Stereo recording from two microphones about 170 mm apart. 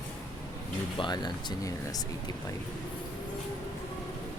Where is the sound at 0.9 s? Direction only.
25° left (ahead or behind).